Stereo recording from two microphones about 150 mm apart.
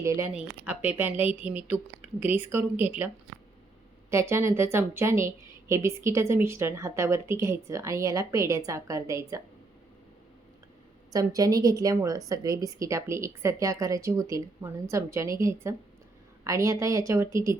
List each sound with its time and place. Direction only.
0.0 s a woman's voice: 20° right (ahead or behind)
0.3 s speech: 10° right (ahead or behind)
4.1 s a woman's voice: 20° right (ahead or behind)
11.1 s a woman's voice: 25° right (ahead or behind)